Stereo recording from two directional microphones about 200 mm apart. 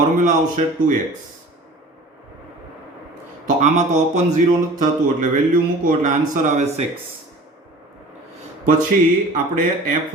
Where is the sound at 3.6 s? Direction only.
35° right (ahead or behind).